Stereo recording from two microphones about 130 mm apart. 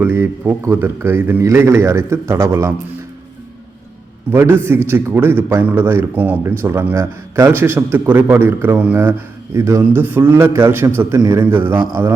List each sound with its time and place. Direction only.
0.0 s a man's voice: 15° right (ahead or behind)
4.3 s a man's voice: 20° right (ahead or behind)